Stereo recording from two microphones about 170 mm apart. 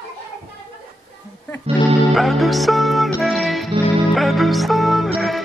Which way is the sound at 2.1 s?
Centre (ahead or behind).